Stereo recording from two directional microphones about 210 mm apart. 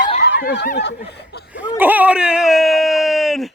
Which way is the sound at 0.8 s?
55° left (ahead or behind).